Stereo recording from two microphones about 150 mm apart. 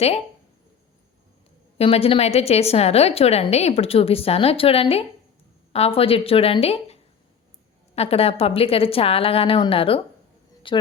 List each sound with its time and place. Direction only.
1.8 s a woman's voice: 40° left (ahead or behind)